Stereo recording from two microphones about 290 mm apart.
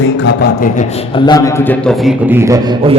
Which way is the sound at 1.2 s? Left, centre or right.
Centre.